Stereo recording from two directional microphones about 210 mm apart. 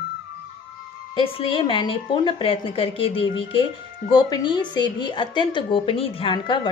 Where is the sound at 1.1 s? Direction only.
25° left (ahead or behind).